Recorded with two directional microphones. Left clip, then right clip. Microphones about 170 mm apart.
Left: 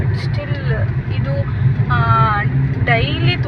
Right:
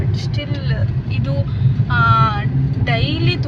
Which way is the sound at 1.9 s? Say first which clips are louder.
Even; 15° right (ahead or behind).